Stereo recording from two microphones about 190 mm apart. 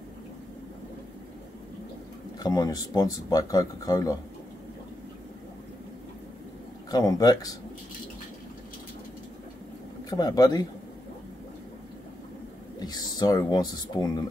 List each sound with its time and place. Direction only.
2.4 s speech: 20° left (ahead or behind)
6.9 s speech: 20° left (ahead or behind)
10.0 s speech: 20° left (ahead or behind)
12.7 s speech: 20° left (ahead or behind)